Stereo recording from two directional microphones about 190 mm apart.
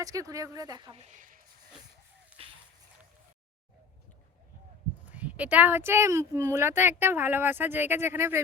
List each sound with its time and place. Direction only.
0.0 s speech: 20° right (ahead or behind)
1.0 s speech: 40° right (ahead or behind)
5.1 s speech: 10° right (ahead or behind)